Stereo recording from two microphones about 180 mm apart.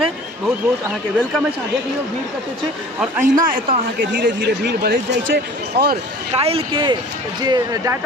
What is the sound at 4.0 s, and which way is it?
Speech, 70° right (ahead or behind).